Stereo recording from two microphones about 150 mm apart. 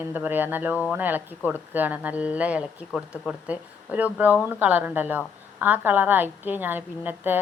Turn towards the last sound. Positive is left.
turn(degrees=-15)  # may be behind; listen again after turning